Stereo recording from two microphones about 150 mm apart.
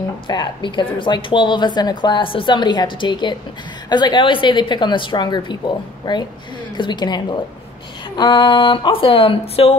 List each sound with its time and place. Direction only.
0.3 s a woman's voice: 30° left (ahead or behind)